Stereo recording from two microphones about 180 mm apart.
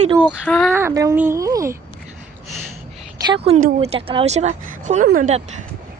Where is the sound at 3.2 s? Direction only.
30° right (ahead or behind); by 5.4 s 45° right (ahead or behind).